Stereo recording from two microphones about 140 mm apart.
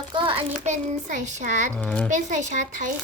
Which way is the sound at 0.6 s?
60° right (ahead or behind).